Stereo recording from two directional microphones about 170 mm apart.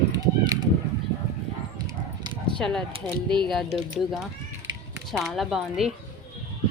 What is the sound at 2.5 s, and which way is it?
Speech, 5° left (ahead or behind).